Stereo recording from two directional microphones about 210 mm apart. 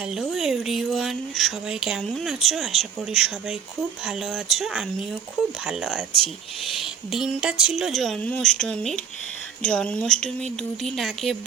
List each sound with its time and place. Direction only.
0.1 s speech: centre (ahead or behind)
6.7 s a sound: centre (ahead or behind)
7.6 s speech: centre (ahead or behind)